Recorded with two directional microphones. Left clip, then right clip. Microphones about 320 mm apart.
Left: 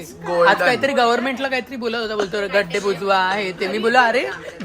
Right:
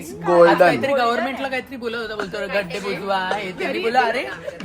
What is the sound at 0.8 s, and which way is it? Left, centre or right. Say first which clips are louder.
Speech: left 2 dB; left.